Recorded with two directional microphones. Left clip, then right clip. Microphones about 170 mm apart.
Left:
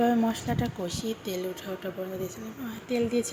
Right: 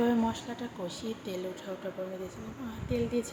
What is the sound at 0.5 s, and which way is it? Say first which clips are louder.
Speech: left 9 dB; 35° left (ahead or behind).